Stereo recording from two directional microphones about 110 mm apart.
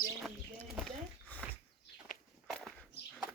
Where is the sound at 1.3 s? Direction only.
15° left (ahead or behind).